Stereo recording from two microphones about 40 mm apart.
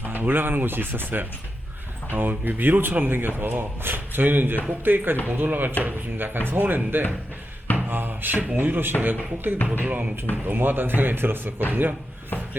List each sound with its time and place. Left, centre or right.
0.1 s speech: right
7.8 s a sound: right
8.5 s speech: right
9.5 s speech: right
9.8 s speech: right
10.4 s speech: right
11.7 s speech: right